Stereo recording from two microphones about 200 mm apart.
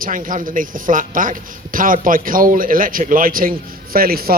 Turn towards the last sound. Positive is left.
turn(degrees=-50)  # may be behind; listen again after turning